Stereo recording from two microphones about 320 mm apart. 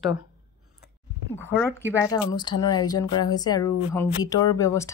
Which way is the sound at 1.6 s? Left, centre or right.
Centre.